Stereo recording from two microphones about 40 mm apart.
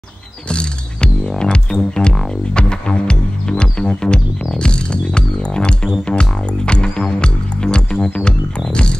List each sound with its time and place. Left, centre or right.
0.5 s music: left